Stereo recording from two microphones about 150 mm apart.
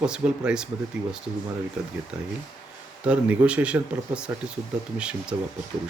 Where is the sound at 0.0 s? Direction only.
5° right (ahead or behind).